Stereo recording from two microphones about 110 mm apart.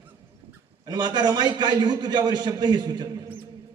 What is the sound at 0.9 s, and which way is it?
A man's voice, 40° right (ahead or behind).